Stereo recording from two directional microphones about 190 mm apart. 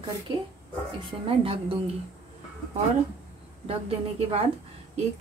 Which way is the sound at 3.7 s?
30° right (ahead or behind).